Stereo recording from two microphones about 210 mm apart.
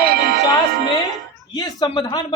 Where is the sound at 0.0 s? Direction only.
50° right (ahead or behind).